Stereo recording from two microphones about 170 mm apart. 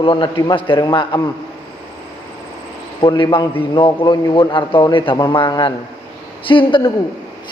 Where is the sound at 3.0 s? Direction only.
25° left (ahead or behind).